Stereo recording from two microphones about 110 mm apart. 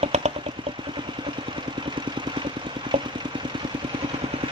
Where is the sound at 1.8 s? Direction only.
45° right (ahead or behind).